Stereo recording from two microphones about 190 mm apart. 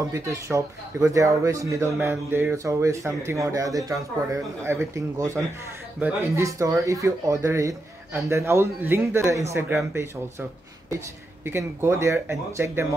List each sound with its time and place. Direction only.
0.1 s speech: 15° right (ahead or behind)
11.4 s speech: 15° right (ahead or behind)